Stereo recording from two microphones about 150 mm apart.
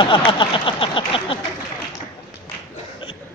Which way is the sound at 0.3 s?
35° left (ahead or behind).